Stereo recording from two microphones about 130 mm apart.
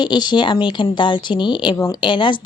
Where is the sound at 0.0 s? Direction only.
35° left (ahead or behind).